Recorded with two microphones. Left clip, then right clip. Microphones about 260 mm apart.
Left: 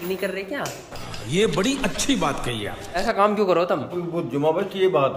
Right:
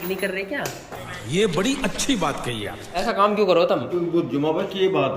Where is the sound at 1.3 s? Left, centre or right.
Centre.